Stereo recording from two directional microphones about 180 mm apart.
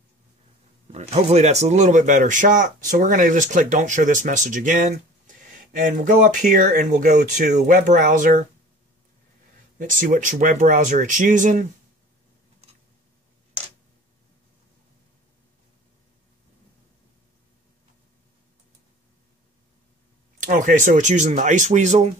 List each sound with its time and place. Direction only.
0.9 s speech: 40° right (ahead or behind)
9.8 s speech: 45° right (ahead or behind)
20.3 s speech: 45° right (ahead or behind)